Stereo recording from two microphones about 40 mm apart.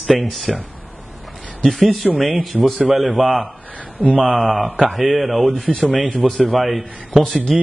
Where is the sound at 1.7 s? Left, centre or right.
Centre.